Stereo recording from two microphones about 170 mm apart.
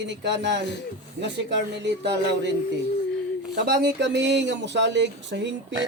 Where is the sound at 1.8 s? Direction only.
90° right.